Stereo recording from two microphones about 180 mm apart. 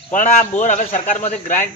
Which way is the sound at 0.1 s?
45° left (ahead or behind).